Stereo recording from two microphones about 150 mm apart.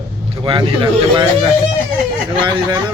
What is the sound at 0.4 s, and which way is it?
A man's voice, 35° right (ahead or behind).